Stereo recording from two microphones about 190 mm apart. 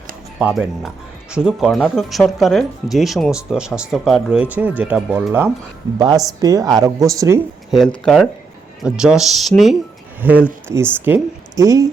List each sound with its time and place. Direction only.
0.3 s speech: 5° right (ahead or behind)
7.7 s speech: centre (ahead or behind); by 11.9 s 15° right (ahead or behind)